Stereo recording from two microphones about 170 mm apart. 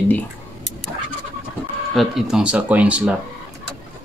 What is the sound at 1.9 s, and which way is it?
Speech, centre (ahead or behind).